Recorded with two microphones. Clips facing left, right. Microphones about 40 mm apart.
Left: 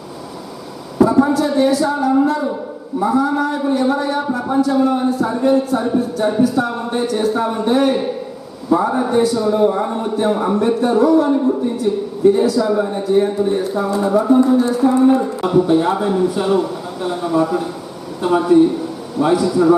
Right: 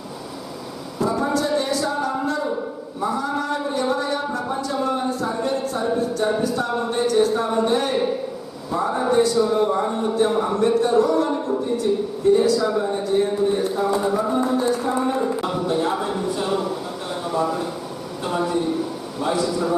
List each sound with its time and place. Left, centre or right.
1.0 s a man's voice: centre
18.2 s a man's voice: centre